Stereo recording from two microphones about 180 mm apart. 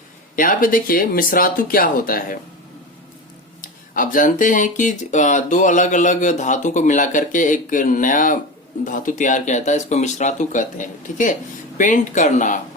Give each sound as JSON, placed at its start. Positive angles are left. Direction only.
{"t": 0.3, "sound": "speech", "side_deg": 50}
{"t": 3.6, "sound": "speech", "side_deg": 50}